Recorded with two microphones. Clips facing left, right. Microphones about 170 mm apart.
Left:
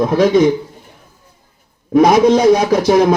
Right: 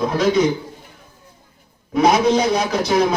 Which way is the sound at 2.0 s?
45° left (ahead or behind).